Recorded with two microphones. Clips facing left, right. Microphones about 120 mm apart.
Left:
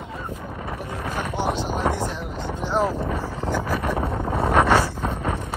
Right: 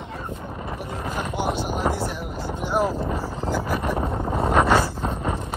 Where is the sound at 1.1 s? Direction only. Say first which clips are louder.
Left 1 dB; 10° right (ahead or behind).